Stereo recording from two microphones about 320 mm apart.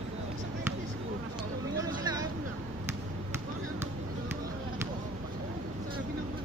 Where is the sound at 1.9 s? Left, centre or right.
Centre.